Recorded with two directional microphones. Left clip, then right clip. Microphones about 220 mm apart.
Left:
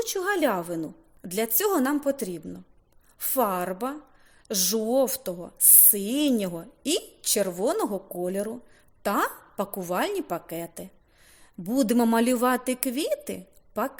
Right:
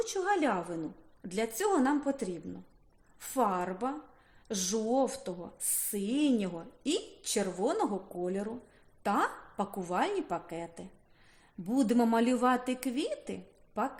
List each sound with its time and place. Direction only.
0.0 s a woman's voice: 45° left (ahead or behind)